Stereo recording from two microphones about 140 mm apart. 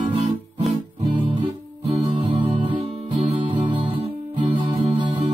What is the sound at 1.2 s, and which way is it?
Music, 35° right (ahead or behind).